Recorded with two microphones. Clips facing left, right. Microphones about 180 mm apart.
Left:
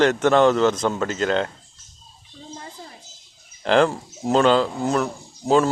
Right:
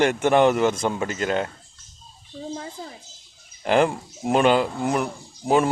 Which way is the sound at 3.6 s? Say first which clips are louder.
Left 2 dB; 10° right (ahead or behind).